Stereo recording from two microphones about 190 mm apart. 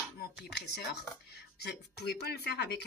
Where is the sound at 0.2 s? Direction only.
60° left (ahead or behind).